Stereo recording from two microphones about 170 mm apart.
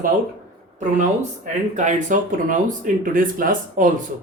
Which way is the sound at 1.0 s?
45° right (ahead or behind).